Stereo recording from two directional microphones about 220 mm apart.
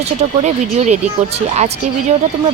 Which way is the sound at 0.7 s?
30° right (ahead or behind).